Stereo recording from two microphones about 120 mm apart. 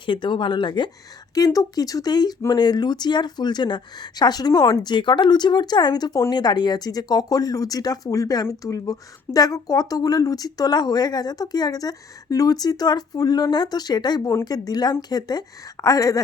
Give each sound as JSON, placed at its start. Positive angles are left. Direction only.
{"t": 0.0, "sound": "speech", "side_deg": 45}
{"t": 1.4, "sound": "a woman's voice", "side_deg": 30}